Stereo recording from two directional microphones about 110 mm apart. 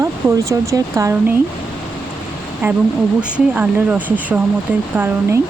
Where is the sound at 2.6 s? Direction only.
15° right (ahead or behind).